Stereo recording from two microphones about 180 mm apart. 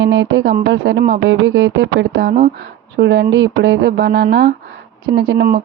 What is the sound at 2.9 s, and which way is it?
Music, 80° right.